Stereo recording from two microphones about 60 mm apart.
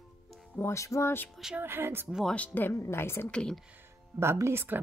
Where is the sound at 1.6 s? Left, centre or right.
Right.